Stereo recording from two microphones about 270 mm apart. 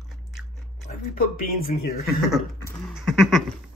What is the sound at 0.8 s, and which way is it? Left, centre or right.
Speech, left.